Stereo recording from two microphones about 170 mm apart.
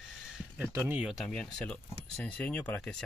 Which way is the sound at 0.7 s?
20° right (ahead or behind).